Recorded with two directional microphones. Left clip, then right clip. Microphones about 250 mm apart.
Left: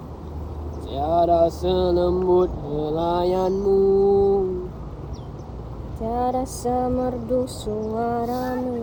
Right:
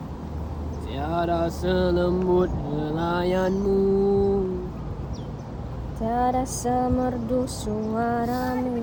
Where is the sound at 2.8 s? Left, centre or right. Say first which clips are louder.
Left 4 dB; centre.